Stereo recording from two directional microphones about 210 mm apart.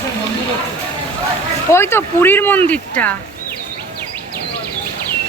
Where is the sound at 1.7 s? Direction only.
10° left (ahead or behind).